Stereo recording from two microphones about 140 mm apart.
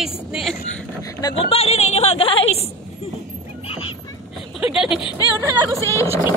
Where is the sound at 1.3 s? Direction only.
45° left (ahead or behind).